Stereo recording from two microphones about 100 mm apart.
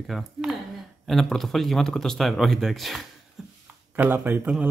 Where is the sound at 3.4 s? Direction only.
5° right (ahead or behind).